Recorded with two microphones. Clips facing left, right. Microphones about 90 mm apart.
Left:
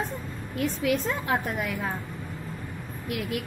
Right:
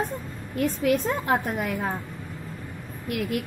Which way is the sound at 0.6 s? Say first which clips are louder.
Right 3 dB; 45° right (ahead or behind).